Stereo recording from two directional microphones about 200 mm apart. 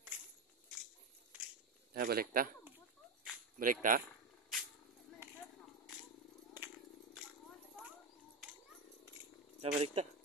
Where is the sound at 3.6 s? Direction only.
40° right (ahead or behind).